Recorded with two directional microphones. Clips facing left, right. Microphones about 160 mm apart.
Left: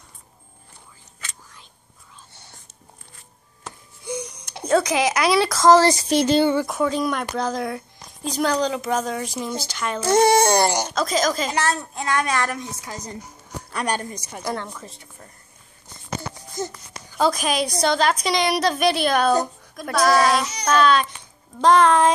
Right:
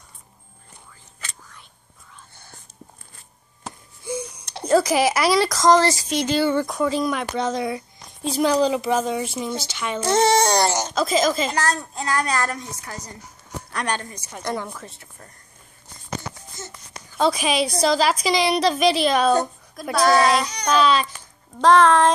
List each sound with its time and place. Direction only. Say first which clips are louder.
4.0 s a sound: right 1 dB; 5° right (ahead or behind)
6.5 s speech: even; 5° left (ahead or behind)
10.3 s a sound: left 1 dB; 50° left (ahead or behind)
10.7 s speech: even; 10° left (ahead or behind)
11.0 s speech: right 3 dB; 5° right (ahead or behind)
12.8 s a woman's voice: left 2 dB; 20° left (ahead or behind)
13.7 s speech: left 2 dB; 5° left (ahead or behind)
17.2 s a child's voice: right 1 dB; 5° right (ahead or behind)